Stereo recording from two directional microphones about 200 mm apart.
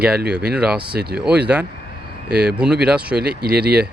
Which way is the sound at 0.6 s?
5° right (ahead or behind).